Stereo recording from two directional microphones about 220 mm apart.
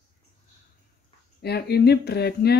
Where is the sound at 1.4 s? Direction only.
45° left (ahead or behind).